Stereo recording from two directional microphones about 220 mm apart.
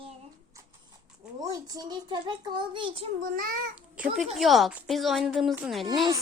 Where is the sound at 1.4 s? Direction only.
15° right (ahead or behind).